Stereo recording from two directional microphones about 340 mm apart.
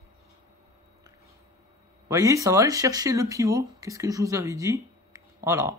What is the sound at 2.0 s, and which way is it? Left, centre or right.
Speech, centre.